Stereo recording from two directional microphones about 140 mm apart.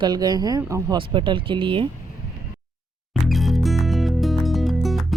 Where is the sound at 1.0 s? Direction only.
35° right (ahead or behind).